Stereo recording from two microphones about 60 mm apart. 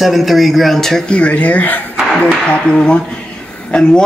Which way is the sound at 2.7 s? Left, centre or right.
Centre.